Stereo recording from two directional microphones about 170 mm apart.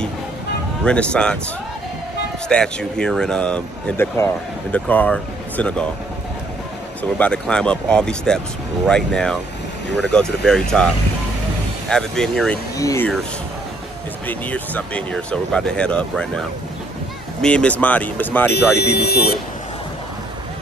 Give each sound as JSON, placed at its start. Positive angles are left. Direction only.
{"t": 0.8, "sound": "speech", "side_deg": 5}
{"t": 2.4, "sound": "speech", "side_deg": 5}
{"t": 7.0, "sound": "speech", "side_deg": 5}
{"t": 11.9, "sound": "speech", "side_deg": 5}
{"t": 12.7, "sound": "speech", "side_deg": 15}
{"t": 14.2, "sound": "speech", "side_deg": 10}
{"t": 17.4, "sound": "speech", "side_deg": 5}
{"t": 18.9, "sound": "speech", "side_deg": 70}